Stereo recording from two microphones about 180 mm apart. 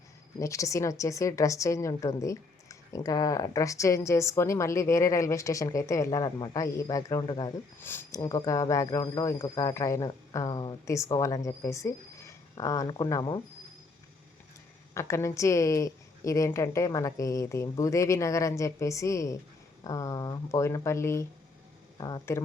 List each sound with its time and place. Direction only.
0.3 s a woman's voice: 15° left (ahead or behind)
7.8 s a woman's voice: 10° left (ahead or behind)
14.9 s a woman's voice: 15° left (ahead or behind)